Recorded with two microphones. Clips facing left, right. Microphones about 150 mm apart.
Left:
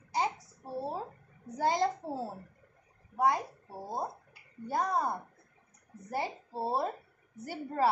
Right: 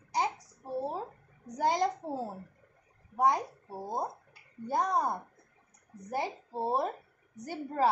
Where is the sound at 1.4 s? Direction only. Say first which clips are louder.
Even; 15° right (ahead or behind).